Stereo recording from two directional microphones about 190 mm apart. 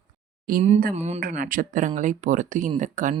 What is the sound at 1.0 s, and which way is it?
Speech, 35° right (ahead or behind).